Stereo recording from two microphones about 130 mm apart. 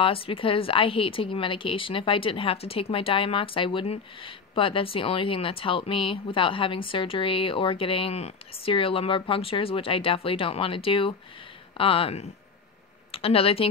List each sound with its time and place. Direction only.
0.0 s speech: 45° left (ahead or behind)